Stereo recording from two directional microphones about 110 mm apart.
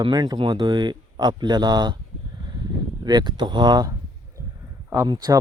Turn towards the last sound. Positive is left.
turn(degrees=-40)  # may be behind; listen again after turning